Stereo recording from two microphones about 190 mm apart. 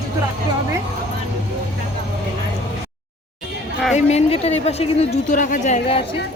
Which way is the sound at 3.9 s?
35° left (ahead or behind).